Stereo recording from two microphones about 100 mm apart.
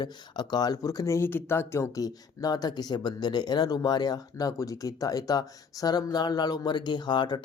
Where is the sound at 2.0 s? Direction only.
40° left (ahead or behind).